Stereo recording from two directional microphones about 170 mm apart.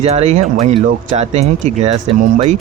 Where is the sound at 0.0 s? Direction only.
40° right (ahead or behind).